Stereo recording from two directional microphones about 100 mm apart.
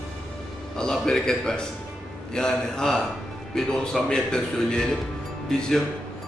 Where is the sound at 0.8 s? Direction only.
5° left (ahead or behind).